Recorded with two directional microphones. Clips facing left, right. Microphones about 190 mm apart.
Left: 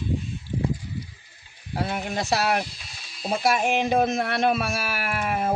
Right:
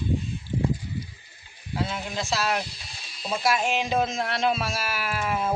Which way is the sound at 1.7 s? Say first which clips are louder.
Left 2 dB; 60° left (ahead or behind).